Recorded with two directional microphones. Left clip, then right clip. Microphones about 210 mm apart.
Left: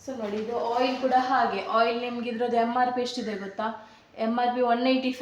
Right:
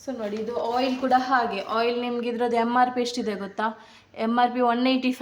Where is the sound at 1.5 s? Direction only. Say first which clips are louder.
Left 1 dB; 25° right (ahead or behind).